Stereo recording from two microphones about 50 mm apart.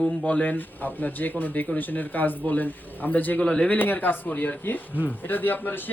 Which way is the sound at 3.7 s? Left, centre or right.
Left.